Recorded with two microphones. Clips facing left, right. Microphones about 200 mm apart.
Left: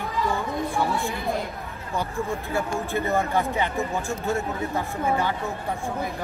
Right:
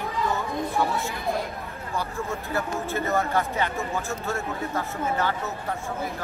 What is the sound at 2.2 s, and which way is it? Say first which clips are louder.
Speech: left 3 dB; 15° left (ahead or behind).